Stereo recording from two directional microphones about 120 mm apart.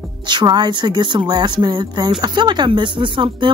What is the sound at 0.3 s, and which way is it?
Speech, 40° right (ahead or behind).